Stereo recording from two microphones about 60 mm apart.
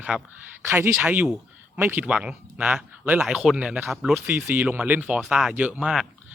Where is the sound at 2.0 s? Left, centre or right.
Centre.